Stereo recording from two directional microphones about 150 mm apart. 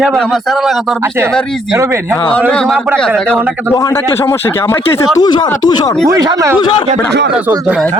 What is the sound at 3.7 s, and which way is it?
Speech, 25° left (ahead or behind).